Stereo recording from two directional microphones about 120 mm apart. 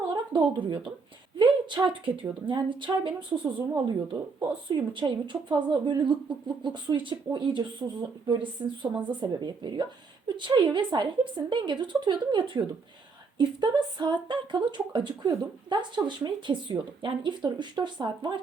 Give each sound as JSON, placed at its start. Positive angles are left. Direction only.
{"t": 0.1, "sound": "a woman's voice", "side_deg": -40}